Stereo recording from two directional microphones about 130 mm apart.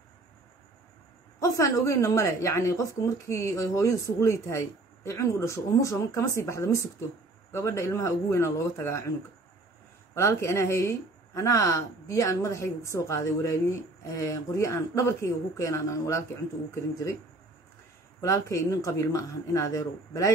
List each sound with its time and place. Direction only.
1.4 s speech: 25° left (ahead or behind)
10.1 s speech: 20° left (ahead or behind)
18.2 s speech: 25° left (ahead or behind)